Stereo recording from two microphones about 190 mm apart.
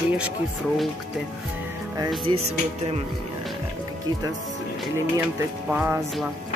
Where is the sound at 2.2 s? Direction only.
35° right (ahead or behind).